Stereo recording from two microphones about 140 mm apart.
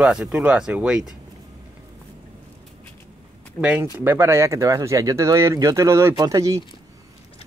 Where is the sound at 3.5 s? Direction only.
10° right (ahead or behind).